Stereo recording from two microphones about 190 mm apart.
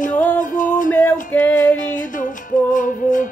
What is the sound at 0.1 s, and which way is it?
Music, 10° left (ahead or behind).